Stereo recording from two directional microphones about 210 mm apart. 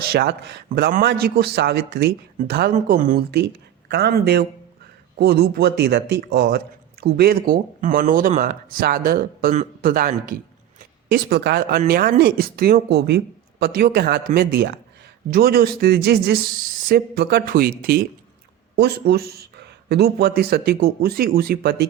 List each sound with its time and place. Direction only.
0.0 s speech: 50° right (ahead or behind)
3.8 s speech: 55° right (ahead or behind)